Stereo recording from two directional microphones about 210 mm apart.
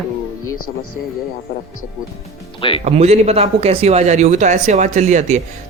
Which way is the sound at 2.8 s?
30° right (ahead or behind).